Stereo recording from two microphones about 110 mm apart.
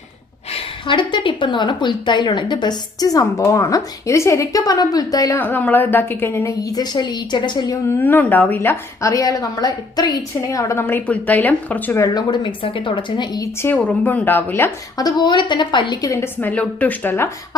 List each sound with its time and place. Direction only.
0.5 s a woman's voice: 50° left (ahead or behind)
5.4 s a woman's voice: 15° left (ahead or behind)
6.7 s a woman's voice: 40° left (ahead or behind)
7.9 s a woman's voice: 20° left (ahead or behind)
11.9 s a woman's voice: 35° left (ahead or behind)
13.4 s a woman's voice: 20° left (ahead or behind)
14.9 s a woman's voice: 40° left (ahead or behind); by 17.2 s 20° left (ahead or behind)